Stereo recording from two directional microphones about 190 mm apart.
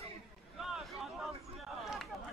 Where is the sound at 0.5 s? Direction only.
Centre (ahead or behind).